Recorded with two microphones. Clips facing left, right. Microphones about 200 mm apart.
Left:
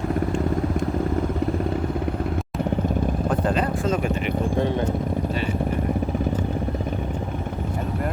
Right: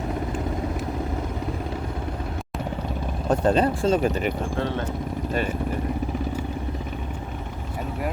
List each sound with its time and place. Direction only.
3.2 s speech: 30° right (ahead or behind)